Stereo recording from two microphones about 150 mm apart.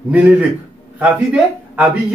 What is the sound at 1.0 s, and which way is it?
Speech, 10° right (ahead or behind).